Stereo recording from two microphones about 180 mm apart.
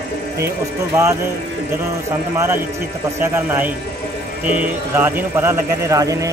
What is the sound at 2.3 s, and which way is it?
A man's voice, 15° right (ahead or behind).